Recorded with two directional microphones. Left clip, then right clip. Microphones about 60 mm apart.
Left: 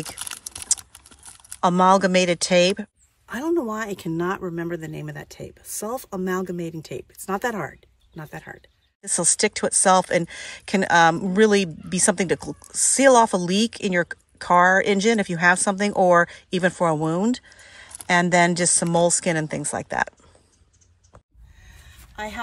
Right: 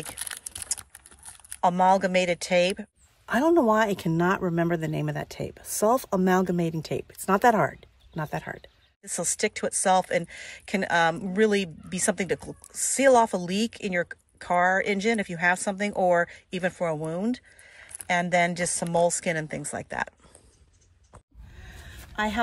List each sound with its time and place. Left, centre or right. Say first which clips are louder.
0.0 s a sound: left 4 dB; left
1.6 s speech: left 4 dB; left
3.3 s speech: right 4 dB; right
4.0 s speech: right 1 dB; centre
4.4 s speech: right 3 dB; right
6.7 s speech: right 2 dB; right
9.0 s speech: left 6 dB; left
21.7 s a sound: right 5 dB; right